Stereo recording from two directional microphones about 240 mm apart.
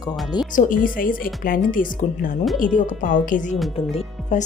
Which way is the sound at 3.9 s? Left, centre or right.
Left.